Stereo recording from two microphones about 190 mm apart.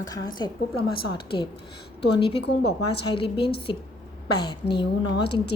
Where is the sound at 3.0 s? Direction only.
30° left (ahead or behind).